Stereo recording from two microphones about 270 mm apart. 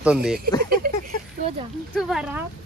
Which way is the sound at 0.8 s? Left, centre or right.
Right.